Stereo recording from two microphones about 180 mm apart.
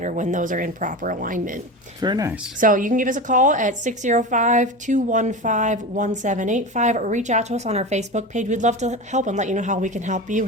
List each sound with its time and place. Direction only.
0.0 s a woman's voice: 45° right (ahead or behind)
2.0 s speech: 20° right (ahead or behind)
2.6 s a woman's voice: 50° right (ahead or behind)